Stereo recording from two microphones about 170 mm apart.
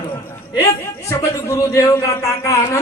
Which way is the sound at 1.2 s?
20° left (ahead or behind).